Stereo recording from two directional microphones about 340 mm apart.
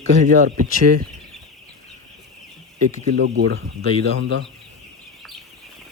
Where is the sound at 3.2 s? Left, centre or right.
Right.